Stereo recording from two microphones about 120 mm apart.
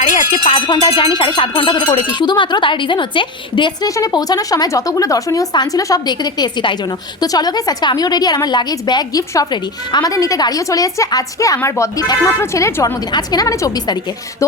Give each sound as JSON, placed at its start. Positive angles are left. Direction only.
{"t": 0.0, "sound": "music", "side_deg": 90}
{"t": 0.4, "sound": "speech", "side_deg": 45}
{"t": 3.8, "sound": "a woman's voice", "side_deg": 30}
{"t": 12.4, "sound": "a woman's voice", "side_deg": 20}